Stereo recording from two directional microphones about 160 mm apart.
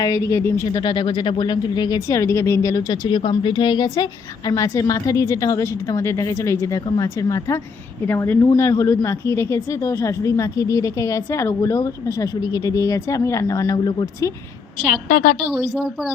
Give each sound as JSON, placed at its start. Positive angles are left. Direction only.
{"t": 0.0, "sound": "speech", "side_deg": 20}
{"t": 14.8, "sound": "a woman's voice", "side_deg": 55}